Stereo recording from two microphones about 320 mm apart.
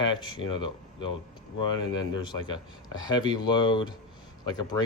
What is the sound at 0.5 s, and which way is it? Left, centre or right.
Speech, centre.